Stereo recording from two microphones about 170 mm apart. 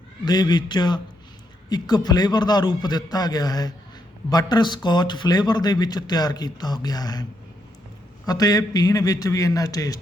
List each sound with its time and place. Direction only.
0.3 s speech: 25° left (ahead or behind)
8.3 s speech: 20° left (ahead or behind)